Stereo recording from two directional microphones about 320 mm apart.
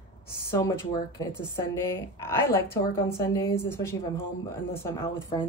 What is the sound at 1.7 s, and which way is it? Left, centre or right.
A woman's voice, centre.